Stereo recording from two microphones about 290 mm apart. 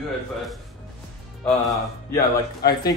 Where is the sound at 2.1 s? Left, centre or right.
Left.